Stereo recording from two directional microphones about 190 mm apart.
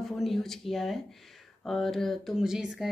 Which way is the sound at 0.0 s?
Centre (ahead or behind).